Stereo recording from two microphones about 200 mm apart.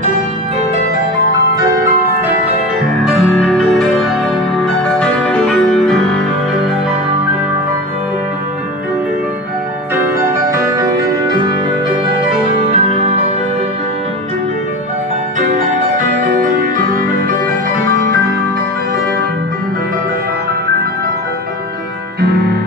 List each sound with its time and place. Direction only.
3.3 s music: centre (ahead or behind)
10.5 s music: 15° right (ahead or behind)
12.7 s music: 30° right (ahead or behind)
16.2 s music: 40° right (ahead or behind)